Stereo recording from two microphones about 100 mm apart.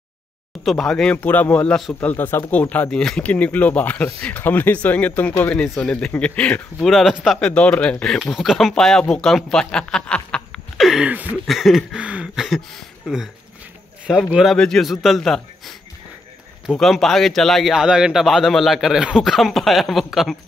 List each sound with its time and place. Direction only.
0.7 s speech: 5° left (ahead or behind)
6.9 s speech: centre (ahead or behind)
7.3 s speech: 10° left (ahead or behind)
10.8 s a sound: 5° right (ahead or behind)
11.4 s speech: centre (ahead or behind)
12.0 s a sound: 10° right (ahead or behind)
12.4 s speech: centre (ahead or behind)
16.7 s speech: centre (ahead or behind)